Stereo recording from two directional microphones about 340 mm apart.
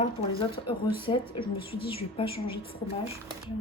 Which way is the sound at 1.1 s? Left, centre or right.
Centre.